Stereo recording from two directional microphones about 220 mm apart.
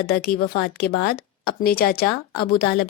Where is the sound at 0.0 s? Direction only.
45° left (ahead or behind).